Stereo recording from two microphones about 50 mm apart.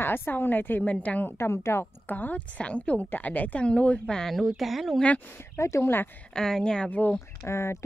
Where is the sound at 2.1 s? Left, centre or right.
Left.